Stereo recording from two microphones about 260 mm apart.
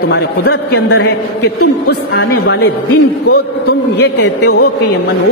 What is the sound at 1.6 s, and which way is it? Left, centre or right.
Speech, left.